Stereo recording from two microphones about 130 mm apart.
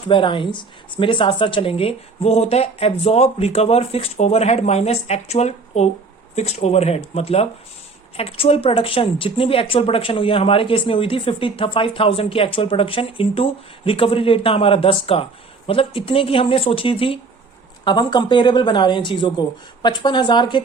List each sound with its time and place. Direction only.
0.1 s a woman's voice: 40° left (ahead or behind)
17.8 s speech: 35° left (ahead or behind)